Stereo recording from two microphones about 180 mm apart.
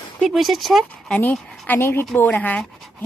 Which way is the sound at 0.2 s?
Centre (ahead or behind).